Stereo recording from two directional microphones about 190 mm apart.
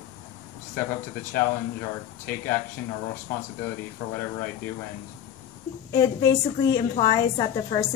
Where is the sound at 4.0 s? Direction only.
20° left (ahead or behind).